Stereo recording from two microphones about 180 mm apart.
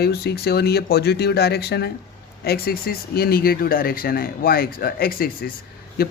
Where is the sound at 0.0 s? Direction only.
60° left (ahead or behind).